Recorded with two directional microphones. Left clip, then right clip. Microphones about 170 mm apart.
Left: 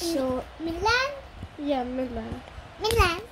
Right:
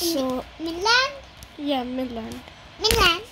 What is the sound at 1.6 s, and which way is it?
Speech, 10° right (ahead or behind).